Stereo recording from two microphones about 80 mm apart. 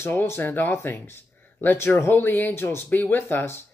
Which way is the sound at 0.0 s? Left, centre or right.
Left.